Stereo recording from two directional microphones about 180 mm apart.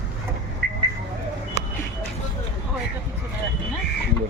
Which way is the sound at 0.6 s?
60° right (ahead or behind).